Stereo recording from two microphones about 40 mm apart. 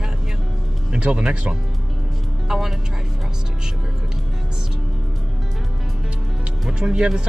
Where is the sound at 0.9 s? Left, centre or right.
Right.